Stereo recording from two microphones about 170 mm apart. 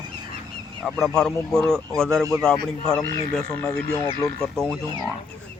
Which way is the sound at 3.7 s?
20° left (ahead or behind).